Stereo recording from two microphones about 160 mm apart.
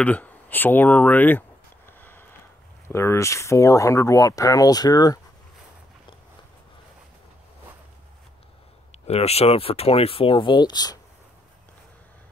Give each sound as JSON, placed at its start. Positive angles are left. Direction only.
{"t": 0.0, "sound": "speech", "side_deg": 10}
{"t": 1.9, "sound": "a sound", "side_deg": 15}
{"t": 2.9, "sound": "speech", "side_deg": 15}
{"t": 9.0, "sound": "speech", "side_deg": 40}